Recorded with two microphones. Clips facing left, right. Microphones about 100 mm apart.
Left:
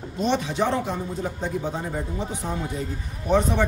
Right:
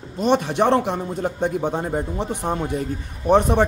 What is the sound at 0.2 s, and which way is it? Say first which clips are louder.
A man's voice: right 5 dB; 55° right (ahead or behind).